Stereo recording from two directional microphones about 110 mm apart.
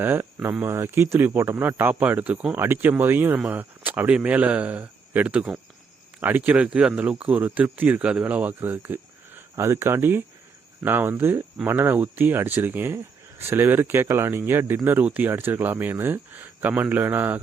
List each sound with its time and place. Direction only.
0.0 s speech: 20° right (ahead or behind)